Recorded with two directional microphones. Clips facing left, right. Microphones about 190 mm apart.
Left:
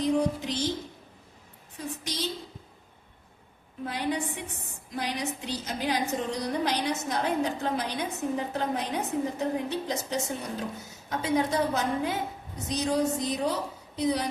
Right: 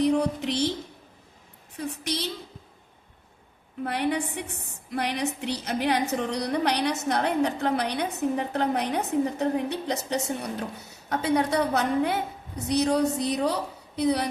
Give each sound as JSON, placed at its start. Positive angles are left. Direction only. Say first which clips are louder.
{"t": 0.0, "sound": "music", "louder": "right 3 dB", "side_deg": -65}
{"t": 2.0, "sound": "a woman's voice", "louder": "right 2 dB", "side_deg": -65}
{"t": 3.8, "sound": "a woman's voice", "louder": "right 3 dB", "side_deg": -65}